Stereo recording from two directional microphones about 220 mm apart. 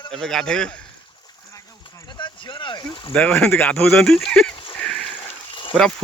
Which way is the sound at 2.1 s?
20° left (ahead or behind).